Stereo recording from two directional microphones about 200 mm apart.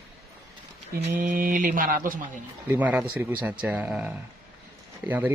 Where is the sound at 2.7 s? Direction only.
10° right (ahead or behind).